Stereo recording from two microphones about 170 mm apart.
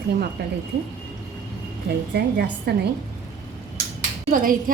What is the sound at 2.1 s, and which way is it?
Speech, 70° right (ahead or behind).